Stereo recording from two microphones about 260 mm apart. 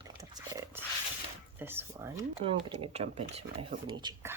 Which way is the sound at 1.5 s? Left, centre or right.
Centre.